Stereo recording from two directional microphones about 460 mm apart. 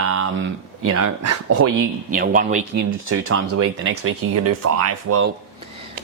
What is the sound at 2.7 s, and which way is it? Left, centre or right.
Speech, right.